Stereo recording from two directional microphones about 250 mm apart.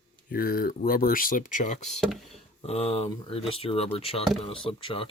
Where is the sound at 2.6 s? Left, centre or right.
Left.